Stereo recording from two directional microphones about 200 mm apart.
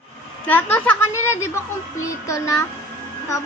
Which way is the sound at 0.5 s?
10° left (ahead or behind).